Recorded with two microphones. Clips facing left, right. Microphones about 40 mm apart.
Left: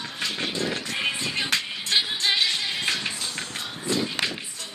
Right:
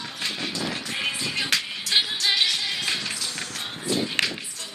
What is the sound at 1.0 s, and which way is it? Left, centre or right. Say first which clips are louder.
Music: even; centre.